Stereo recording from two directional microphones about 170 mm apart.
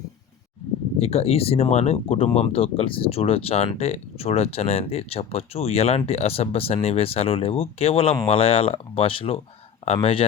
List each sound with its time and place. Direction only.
0.9 s speech: 35° left (ahead or behind)